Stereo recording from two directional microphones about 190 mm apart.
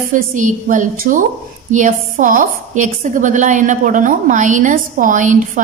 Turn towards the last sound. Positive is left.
turn(degrees=-40)  # may be behind; listen again after turning